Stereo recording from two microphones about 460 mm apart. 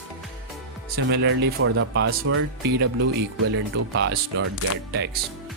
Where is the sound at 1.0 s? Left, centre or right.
Right.